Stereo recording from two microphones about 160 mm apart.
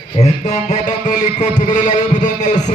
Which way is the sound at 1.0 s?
50° left (ahead or behind).